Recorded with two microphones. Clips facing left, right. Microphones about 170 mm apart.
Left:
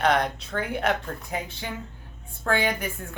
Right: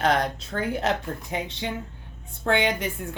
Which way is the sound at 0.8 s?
25° right (ahead or behind).